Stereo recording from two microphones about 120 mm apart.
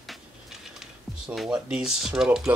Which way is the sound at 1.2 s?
5° right (ahead or behind).